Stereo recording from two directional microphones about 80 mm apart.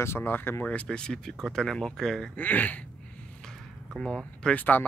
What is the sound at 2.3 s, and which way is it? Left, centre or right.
Speech, left.